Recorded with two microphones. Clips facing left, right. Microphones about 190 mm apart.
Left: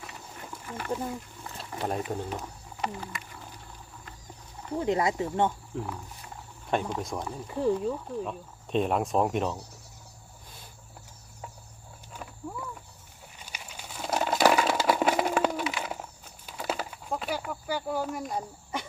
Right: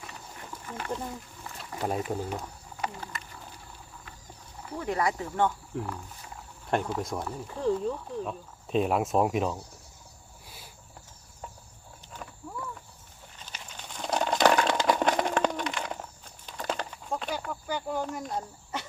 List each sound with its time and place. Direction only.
0.5 s speech: 5° left (ahead or behind)
1.8 s speech: 5° right (ahead or behind)
4.8 s speech: 20° left (ahead or behind)
5.7 s speech: 5° left (ahead or behind)
12.1 s wild animals: 5° left (ahead or behind)
13.4 s a sound: 10° left (ahead or behind)